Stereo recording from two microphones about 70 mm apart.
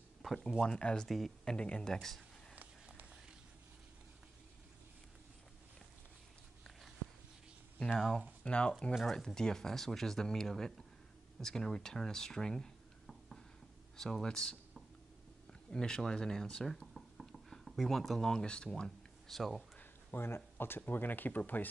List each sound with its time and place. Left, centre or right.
0.2 s speech: centre
2.9 s run: centre
8.5 s speech: centre
15.7 s speech: centre
19.2 s speech: centre
19.8 s speech: left